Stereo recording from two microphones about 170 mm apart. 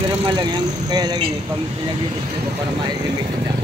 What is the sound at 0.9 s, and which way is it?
Speech, 25° right (ahead or behind).